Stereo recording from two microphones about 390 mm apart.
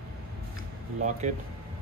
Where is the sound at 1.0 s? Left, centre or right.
Centre.